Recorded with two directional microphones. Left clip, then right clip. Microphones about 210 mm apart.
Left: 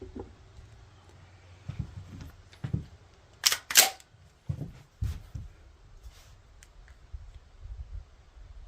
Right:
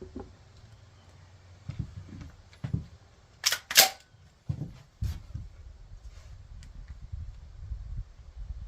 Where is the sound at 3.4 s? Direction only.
55° left (ahead or behind).